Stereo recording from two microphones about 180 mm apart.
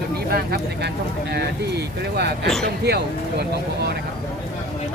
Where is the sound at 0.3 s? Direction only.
60° right (ahead or behind).